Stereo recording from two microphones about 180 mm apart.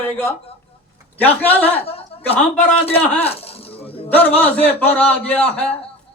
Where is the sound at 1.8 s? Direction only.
35° left (ahead or behind).